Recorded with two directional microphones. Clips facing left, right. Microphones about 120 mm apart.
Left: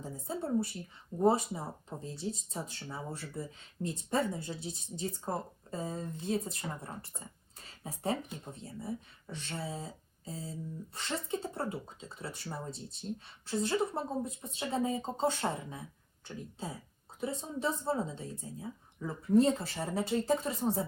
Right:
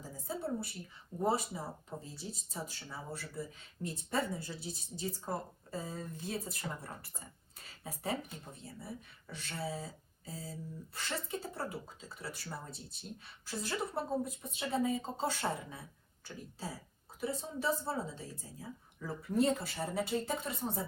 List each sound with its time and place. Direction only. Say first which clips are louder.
0.0 s a sound: left 2 dB; 25° left (ahead or behind)
1.2 s speech: left 5 dB; 25° left (ahead or behind)
20.5 s speech: left 6 dB; centre (ahead or behind)